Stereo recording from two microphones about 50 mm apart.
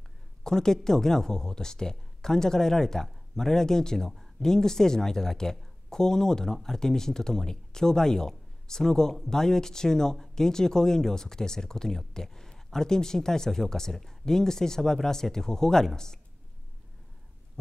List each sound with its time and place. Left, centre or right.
0.4 s speech: centre